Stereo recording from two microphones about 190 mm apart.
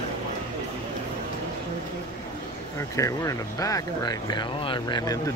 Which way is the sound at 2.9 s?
15° left (ahead or behind).